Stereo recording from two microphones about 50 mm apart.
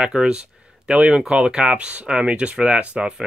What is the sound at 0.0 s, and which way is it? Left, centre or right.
Speech, centre.